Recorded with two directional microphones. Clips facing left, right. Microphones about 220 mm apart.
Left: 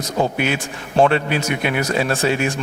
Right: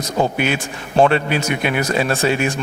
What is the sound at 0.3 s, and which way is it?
Speech, 15° right (ahead or behind).